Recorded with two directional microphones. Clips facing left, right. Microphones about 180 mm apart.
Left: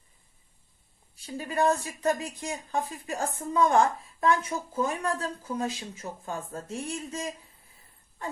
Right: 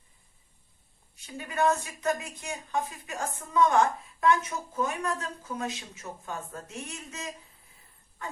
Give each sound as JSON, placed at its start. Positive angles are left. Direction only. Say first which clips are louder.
{"t": 1.2, "sound": "speech", "louder": "left 1 dB", "side_deg": 35}